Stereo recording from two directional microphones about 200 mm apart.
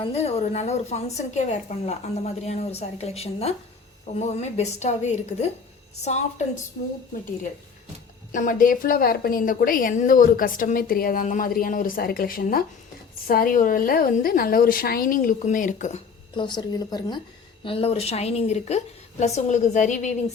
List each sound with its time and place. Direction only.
0.0 s a woman's voice: 30° left (ahead or behind)
8.3 s a woman's voice: 40° left (ahead or behind)
16.3 s a woman's voice: 25° left (ahead or behind)